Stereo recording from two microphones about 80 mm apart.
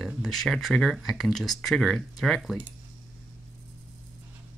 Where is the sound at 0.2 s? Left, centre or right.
Centre.